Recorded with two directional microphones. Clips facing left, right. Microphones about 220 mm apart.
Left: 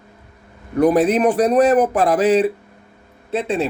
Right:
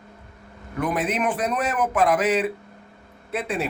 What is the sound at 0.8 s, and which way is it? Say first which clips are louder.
A man's voice: left 10 dB; 35° left (ahead or behind).